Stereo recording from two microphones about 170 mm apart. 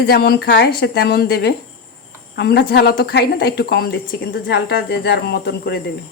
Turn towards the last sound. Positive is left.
turn(degrees=75)  # may be behind; listen again after turning